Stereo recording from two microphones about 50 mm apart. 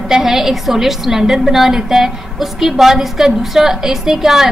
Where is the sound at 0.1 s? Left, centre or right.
Centre.